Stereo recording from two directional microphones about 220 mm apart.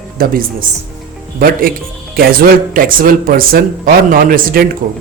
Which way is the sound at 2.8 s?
40° right (ahead or behind).